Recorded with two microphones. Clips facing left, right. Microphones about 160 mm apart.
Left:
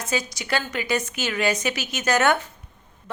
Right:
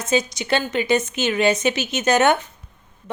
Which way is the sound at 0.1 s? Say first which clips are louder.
Right 6 dB; 25° right (ahead or behind).